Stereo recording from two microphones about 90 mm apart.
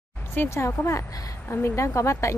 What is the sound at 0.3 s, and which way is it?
Speech, 25° left (ahead or behind).